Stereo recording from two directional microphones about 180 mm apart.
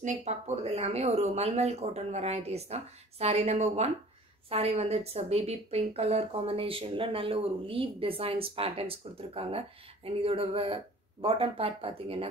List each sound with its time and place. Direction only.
0.0 s a woman's voice: 40° right (ahead or behind)